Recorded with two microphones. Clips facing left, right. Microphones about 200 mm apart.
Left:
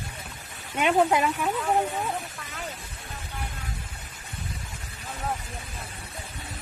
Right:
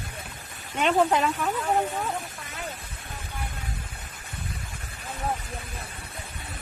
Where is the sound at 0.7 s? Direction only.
10° left (ahead or behind).